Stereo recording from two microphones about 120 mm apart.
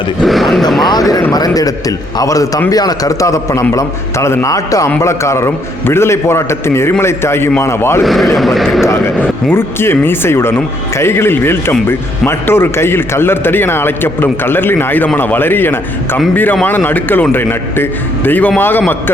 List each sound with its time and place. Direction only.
0.2 s speech: centre (ahead or behind)
0.9 s a man's voice: 35° left (ahead or behind)
8.0 s speech: centre (ahead or behind)
9.5 s a man's voice: 20° left (ahead or behind)